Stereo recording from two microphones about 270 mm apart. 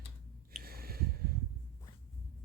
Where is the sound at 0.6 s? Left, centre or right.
Right.